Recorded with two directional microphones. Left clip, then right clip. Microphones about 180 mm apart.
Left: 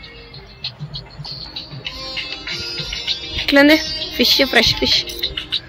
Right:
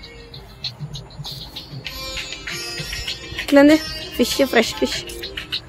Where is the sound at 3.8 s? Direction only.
40° left (ahead or behind).